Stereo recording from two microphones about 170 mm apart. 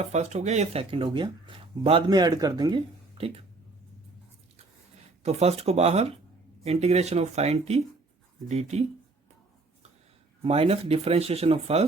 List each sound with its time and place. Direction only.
0.0 s speech: 40° right (ahead or behind)
5.2 s speech: 40° right (ahead or behind)
10.4 s speech: 35° right (ahead or behind)